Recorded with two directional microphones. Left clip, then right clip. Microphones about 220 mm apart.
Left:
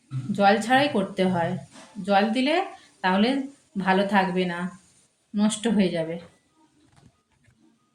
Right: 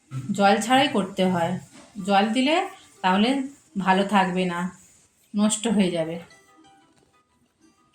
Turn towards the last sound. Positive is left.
turn(degrees=-10)  # may be behind; listen again after turning